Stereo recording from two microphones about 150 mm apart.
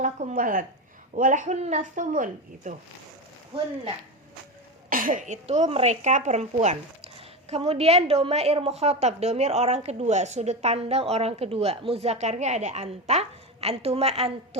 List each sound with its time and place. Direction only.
0.0 s speech: 60° right (ahead or behind)
3.5 s speech: 35° right (ahead or behind)
4.9 s a woman's voice: 65° right (ahead or behind); by 14.6 s 45° right (ahead or behind)